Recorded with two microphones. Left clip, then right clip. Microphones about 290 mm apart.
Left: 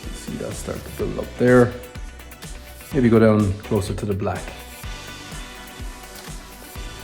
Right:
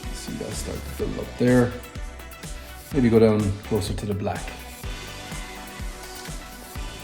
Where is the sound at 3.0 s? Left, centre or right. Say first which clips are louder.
Left 2 dB; left.